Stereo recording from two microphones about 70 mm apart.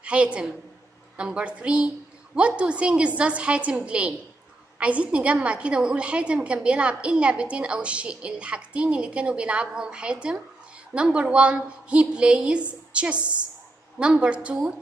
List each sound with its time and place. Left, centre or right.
0.0 s a woman's voice: centre